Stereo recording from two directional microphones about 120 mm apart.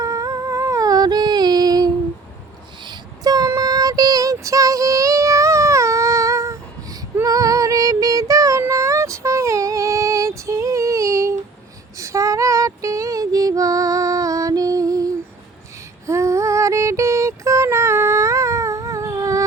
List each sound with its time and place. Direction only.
0.0 s humming: 30° right (ahead or behind)
2.8 s child singing: 35° right (ahead or behind)
11.9 s female singing: 25° right (ahead or behind)